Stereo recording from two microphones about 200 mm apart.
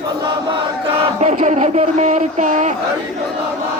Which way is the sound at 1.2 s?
35° right (ahead or behind).